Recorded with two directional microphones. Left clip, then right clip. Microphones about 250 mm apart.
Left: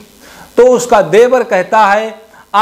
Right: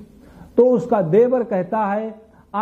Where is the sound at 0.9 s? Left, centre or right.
Centre.